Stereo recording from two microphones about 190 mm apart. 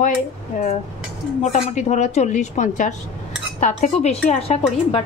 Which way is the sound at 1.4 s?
40° left (ahead or behind).